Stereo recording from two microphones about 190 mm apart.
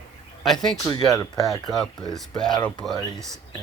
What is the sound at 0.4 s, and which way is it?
Speech, centre (ahead or behind).